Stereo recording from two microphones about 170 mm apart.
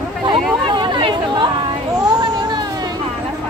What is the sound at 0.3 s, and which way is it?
Chatter, 25° right (ahead or behind).